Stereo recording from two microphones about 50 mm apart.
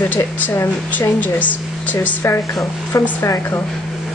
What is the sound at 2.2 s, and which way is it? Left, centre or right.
Speech, left.